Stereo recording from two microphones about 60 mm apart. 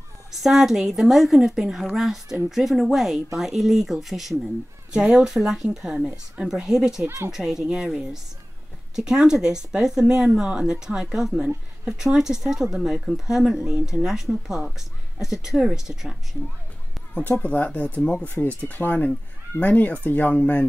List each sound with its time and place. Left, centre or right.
0.3 s a woman's voice: centre
4.9 s speech: centre
17.1 s speech: left